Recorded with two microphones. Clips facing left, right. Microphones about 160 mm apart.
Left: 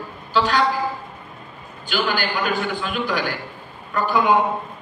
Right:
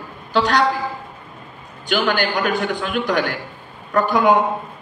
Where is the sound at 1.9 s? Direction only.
70° right (ahead or behind).